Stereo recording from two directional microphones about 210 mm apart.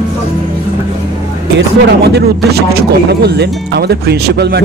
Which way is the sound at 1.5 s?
50° right (ahead or behind).